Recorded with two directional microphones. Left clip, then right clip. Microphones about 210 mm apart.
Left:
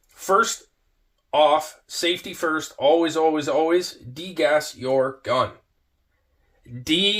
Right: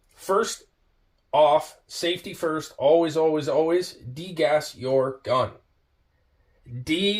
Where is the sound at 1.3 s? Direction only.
35° left (ahead or behind).